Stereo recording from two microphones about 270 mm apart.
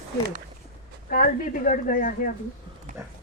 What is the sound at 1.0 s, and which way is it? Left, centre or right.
Speech, left.